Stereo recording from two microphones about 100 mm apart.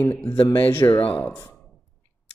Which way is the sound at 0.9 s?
70° left (ahead or behind).